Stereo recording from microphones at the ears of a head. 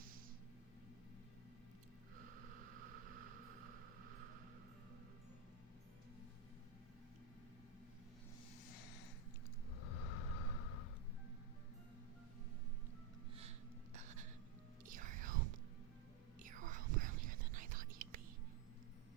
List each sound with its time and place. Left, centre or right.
2.1 s a sound: right
9.8 s vehicle: left
13.9 s music: right
14.8 s whispering: right